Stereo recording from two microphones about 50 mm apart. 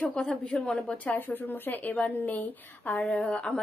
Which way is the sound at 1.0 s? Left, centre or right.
Left.